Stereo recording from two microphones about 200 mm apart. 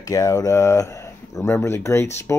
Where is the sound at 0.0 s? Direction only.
15° left (ahead or behind).